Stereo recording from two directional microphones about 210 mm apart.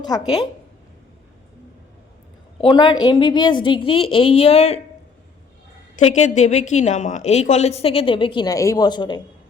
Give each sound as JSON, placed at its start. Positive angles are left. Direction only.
{"t": 0.0, "sound": "speech", "side_deg": 20}
{"t": 2.6, "sound": "a woman's voice", "side_deg": 20}
{"t": 6.0, "sound": "a woman's voice", "side_deg": 30}